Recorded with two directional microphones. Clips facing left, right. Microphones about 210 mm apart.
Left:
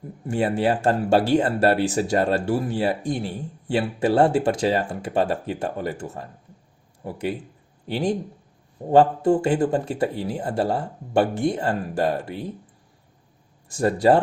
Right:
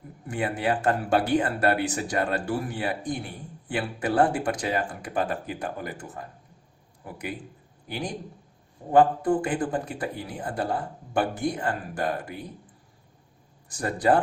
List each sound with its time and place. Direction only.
0.3 s speech: 30° left (ahead or behind)
13.7 s speech: 25° left (ahead or behind)